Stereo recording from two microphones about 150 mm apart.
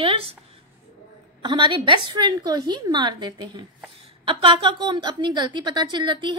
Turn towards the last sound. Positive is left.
turn(degrees=-30)  # may be behind; listen again after turning